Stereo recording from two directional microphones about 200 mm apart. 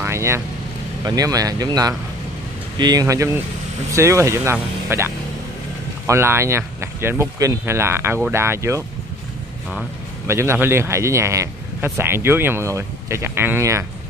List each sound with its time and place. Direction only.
0.0 s vehicle: 15° right (ahead or behind)
1.0 s speech: 20° right (ahead or behind)
10.2 s speech: 15° right (ahead or behind)